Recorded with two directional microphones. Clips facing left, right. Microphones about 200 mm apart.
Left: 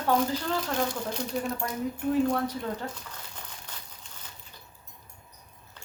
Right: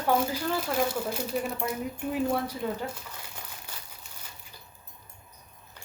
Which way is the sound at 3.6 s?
10° right (ahead or behind).